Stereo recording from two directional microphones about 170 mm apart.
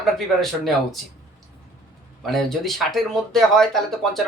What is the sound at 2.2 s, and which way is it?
Speech, centre (ahead or behind).